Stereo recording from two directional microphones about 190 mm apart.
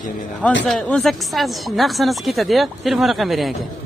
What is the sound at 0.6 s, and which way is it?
Speech, 5° left (ahead or behind).